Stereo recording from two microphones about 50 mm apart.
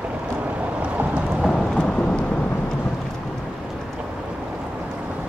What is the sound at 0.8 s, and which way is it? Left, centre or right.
Thunder, right.